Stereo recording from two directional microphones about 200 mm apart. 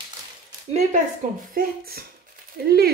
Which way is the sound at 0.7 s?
40° right (ahead or behind).